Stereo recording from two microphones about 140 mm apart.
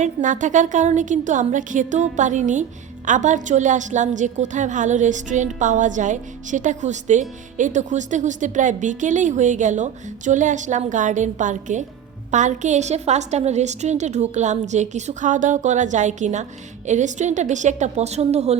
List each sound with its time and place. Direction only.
0.0 s a woman's voice: 65° right (ahead or behind); by 18.5 s 50° right (ahead or behind)